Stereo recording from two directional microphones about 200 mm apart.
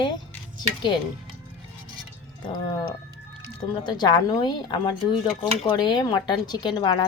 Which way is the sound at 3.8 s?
20° left (ahead or behind).